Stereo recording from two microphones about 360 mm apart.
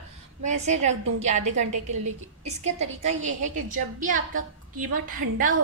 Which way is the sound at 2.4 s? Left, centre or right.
Centre.